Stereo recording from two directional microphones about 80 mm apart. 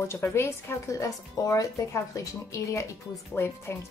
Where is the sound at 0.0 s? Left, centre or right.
Left.